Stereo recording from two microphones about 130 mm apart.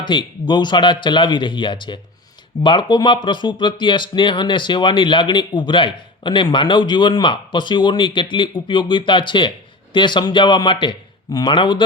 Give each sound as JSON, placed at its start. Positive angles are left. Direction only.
{"t": 0.0, "sound": "speech", "side_deg": 35}